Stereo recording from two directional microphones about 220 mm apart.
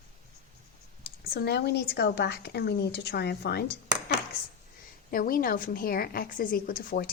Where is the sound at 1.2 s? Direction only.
45° left (ahead or behind).